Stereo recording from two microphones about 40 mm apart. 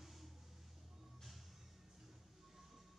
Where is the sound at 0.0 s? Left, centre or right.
Centre.